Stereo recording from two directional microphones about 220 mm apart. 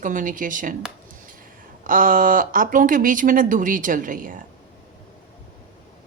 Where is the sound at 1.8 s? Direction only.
40° right (ahead or behind).